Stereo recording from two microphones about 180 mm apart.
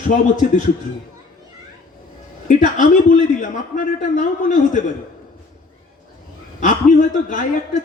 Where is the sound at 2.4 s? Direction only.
45° left (ahead or behind).